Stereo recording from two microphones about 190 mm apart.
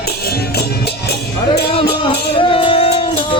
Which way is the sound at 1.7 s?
30° left (ahead or behind).